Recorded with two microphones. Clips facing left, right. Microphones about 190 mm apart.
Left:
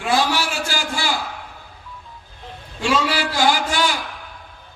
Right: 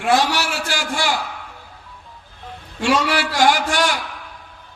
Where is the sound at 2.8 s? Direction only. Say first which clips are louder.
Right 2 dB; 75° right (ahead or behind).